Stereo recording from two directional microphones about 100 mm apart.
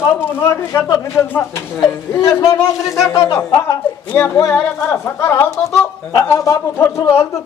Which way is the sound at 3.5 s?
25° left (ahead or behind).